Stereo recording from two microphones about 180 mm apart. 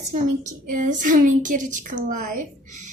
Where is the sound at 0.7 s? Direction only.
45° right (ahead or behind).